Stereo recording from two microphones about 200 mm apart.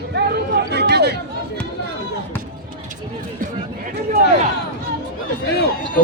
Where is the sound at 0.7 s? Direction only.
55° right (ahead or behind).